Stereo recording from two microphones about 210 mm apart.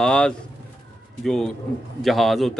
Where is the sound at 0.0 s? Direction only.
5° left (ahead or behind).